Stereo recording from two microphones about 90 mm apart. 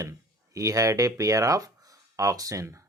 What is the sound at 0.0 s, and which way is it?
Speech, 40° right (ahead or behind).